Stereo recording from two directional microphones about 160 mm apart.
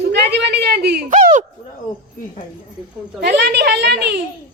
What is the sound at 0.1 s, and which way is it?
Speech, 90° right.